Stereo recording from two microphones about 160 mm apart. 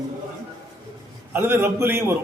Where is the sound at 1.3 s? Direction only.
15° right (ahead or behind).